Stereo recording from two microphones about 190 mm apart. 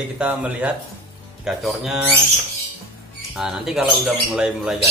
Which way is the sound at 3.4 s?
Centre (ahead or behind).